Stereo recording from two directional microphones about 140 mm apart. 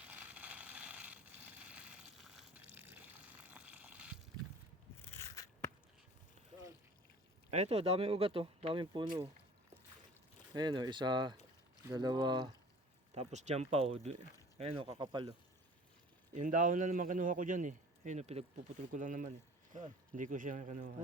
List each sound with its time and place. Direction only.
0.0 s a sound: 10° right (ahead or behind)
2.7 s water: 15° right (ahead or behind)
5.0 s a sound: 20° left (ahead or behind)
7.5 s speech: 50° right (ahead or behind)
10.5 s speech: 30° right (ahead or behind)
13.1 s speech: 55° right (ahead or behind); by 15.4 s 35° right (ahead or behind)
16.3 s a man's voice: 65° right (ahead or behind)
18.9 s speech: 70° right (ahead or behind)